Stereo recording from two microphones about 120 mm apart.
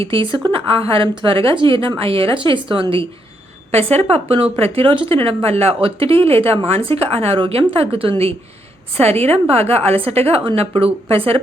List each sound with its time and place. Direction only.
0.0 s a woman's voice: 50° right (ahead or behind)
3.7 s a woman's voice: 60° right (ahead or behind)
9.3 s a woman's voice: 55° right (ahead or behind)